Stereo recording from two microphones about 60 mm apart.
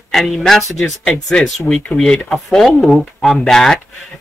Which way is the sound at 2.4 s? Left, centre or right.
Centre.